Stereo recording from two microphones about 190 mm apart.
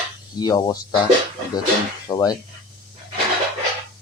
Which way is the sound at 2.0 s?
20° left (ahead or behind).